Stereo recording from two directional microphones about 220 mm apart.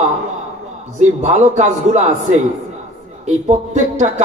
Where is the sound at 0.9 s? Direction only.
35° right (ahead or behind).